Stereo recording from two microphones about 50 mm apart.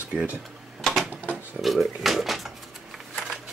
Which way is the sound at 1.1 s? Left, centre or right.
Right.